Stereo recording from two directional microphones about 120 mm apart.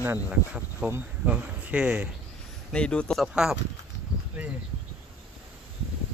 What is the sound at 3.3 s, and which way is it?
Speech, 5° right (ahead or behind).